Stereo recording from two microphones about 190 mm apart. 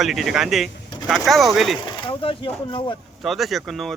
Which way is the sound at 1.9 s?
25° left (ahead or behind).